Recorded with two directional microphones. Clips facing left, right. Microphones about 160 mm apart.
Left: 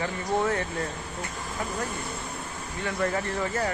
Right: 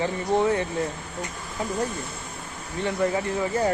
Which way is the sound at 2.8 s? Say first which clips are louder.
Right 4 dB; 15° right (ahead or behind).